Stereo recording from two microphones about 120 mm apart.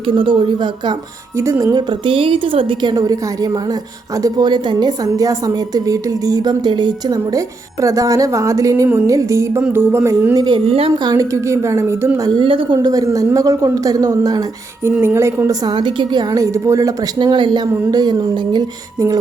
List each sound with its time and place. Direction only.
0.0 s a woman's voice: 45° right (ahead or behind)
1.4 s a woman's voice: 25° right (ahead or behind)
1.9 s a woman's voice: 45° right (ahead or behind)
2.9 s a woman's voice: 30° right (ahead or behind)
9.6 s music: 15° right (ahead or behind)
10.3 s a woman's voice: 40° right (ahead or behind)
10.7 s a woman's voice: 50° right (ahead or behind)
10.9 s a woman's voice: 35° right (ahead or behind)
12.4 s a woman's voice: 45° right (ahead or behind); by 14.4 s 30° right (ahead or behind)
14.9 s a woman's voice: 20° right (ahead or behind)
15.6 s a woman's voice: 40° right (ahead or behind)